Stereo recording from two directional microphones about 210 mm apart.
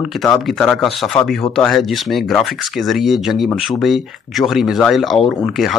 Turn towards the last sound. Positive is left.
turn(degrees=0)  # may be behind; listen again after turning